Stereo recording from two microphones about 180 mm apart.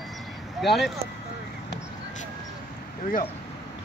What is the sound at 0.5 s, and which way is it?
Speech, centre (ahead or behind).